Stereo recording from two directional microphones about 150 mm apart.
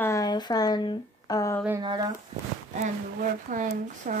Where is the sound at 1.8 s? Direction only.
30° right (ahead or behind).